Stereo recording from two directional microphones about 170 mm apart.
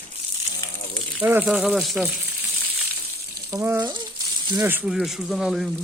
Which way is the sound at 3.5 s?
15° right (ahead or behind).